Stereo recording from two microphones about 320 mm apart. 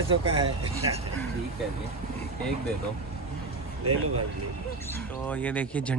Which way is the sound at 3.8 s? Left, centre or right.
Right.